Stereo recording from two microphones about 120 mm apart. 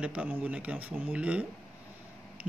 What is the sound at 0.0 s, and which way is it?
Speech, 10° right (ahead or behind).